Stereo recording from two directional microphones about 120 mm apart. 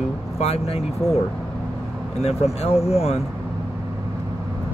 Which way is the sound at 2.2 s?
60° left (ahead or behind).